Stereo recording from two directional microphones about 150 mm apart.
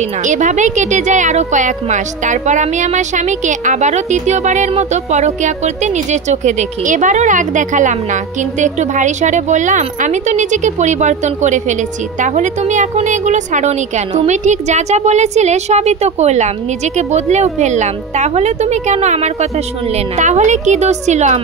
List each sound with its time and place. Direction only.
0.2 s a woman's voice: 55° right (ahead or behind)